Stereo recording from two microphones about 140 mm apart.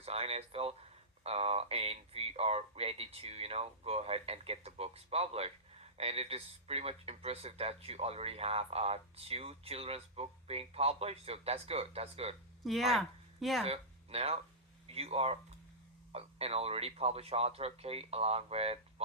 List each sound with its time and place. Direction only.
0.0 s speech: 45° right (ahead or behind)
12.6 s speech: centre (ahead or behind)
13.7 s speech: 45° right (ahead or behind)